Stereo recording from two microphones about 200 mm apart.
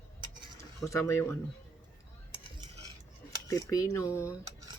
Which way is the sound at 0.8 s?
15° left (ahead or behind).